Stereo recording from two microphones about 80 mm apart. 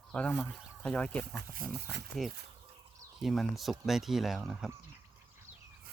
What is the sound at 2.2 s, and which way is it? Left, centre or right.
Speech, centre.